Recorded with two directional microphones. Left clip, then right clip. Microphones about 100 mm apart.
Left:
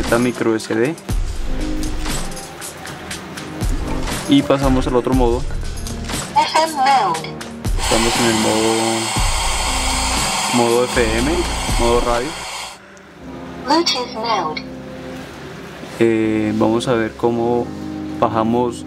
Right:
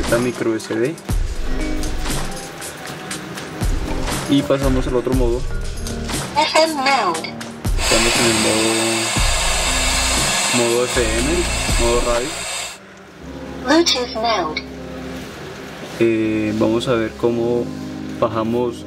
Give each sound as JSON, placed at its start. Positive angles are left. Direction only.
{"t": 0.0, "sound": "speech", "side_deg": 0}
{"t": 1.6, "sound": "music", "side_deg": 0}
{"t": 4.0, "sound": "music", "side_deg": 0}
{"t": 4.6, "sound": "a woman's voice", "side_deg": 0}
{"t": 4.8, "sound": "speech", "side_deg": 30}
{"t": 5.9, "sound": "music", "side_deg": 0}
{"t": 13.7, "sound": "a woman's voice", "side_deg": 0}
{"t": 16.0, "sound": "speech", "side_deg": 10}